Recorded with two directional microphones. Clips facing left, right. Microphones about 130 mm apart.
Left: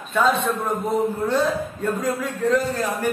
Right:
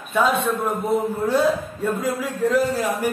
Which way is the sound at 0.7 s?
5° right (ahead or behind).